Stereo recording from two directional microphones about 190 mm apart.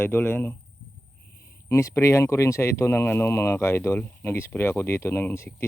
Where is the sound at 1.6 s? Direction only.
15° left (ahead or behind).